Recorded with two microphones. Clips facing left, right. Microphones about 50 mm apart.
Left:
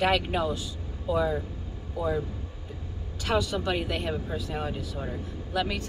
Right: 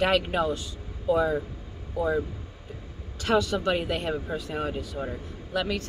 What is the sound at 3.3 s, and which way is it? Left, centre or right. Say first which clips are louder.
A man's voice: right 3 dB; centre.